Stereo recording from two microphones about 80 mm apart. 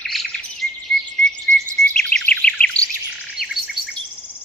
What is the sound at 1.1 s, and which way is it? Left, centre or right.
Chirp, centre.